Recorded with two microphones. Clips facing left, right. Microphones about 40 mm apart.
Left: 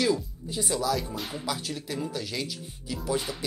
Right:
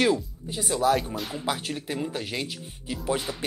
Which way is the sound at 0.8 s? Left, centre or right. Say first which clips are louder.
Right 5 dB; right.